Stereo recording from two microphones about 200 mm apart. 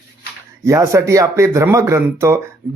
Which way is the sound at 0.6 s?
15° right (ahead or behind).